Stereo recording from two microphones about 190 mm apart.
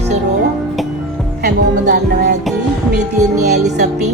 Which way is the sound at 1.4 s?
60° right (ahead or behind).